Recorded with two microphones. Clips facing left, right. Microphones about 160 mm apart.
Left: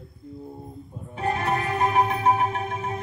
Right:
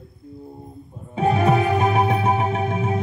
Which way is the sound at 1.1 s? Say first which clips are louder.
Right 7 dB; 90° right.